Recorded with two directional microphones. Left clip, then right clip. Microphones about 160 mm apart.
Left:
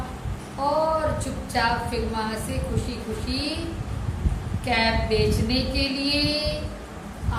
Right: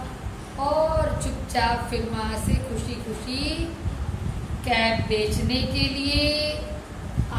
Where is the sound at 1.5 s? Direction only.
10° right (ahead or behind).